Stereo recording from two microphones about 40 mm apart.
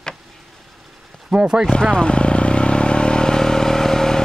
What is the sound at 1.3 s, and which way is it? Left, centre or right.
Speech, right.